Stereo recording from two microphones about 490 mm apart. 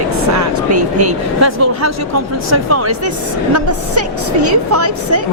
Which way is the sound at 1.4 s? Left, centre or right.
Right.